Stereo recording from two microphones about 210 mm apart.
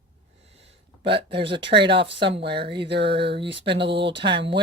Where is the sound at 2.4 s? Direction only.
50° right (ahead or behind).